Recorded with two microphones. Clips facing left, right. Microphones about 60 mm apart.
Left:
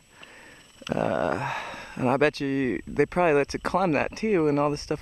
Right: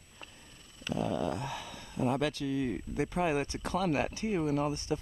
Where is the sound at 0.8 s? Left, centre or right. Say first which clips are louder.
Left 7 dB; left.